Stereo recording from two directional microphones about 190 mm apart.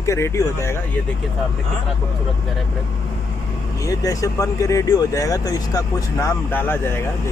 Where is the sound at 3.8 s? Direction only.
20° left (ahead or behind).